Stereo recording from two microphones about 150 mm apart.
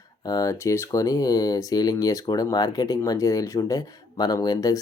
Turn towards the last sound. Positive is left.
turn(degrees=25)  # may be behind; listen again after turning